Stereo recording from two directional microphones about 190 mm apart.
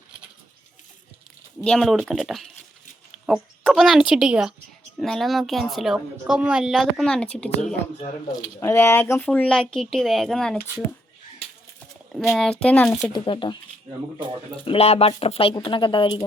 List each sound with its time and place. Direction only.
1.6 s a woman's voice: 5° left (ahead or behind)
12.3 s a woman's voice: 5° left (ahead or behind)
13.1 s speech: 25° left (ahead or behind)
14.6 s speech: 30° left (ahead or behind)